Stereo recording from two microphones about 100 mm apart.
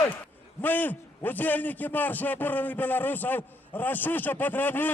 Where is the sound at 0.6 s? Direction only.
20° left (ahead or behind).